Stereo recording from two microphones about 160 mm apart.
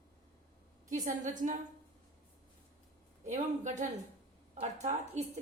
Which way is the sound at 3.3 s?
50° right (ahead or behind).